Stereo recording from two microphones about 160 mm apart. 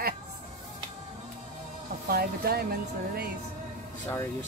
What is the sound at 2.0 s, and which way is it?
Speech, 70° right (ahead or behind).